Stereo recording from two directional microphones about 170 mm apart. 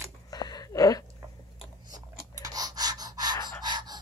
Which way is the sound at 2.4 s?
20° right (ahead or behind).